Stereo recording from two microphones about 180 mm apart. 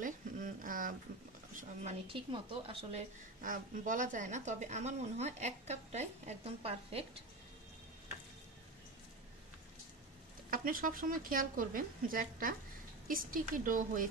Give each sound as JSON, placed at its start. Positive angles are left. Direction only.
{"t": 0.6, "sound": "a sound", "side_deg": -50}
{"t": 1.5, "sound": "speech", "side_deg": -45}
{"t": 10.5, "sound": "speech", "side_deg": -50}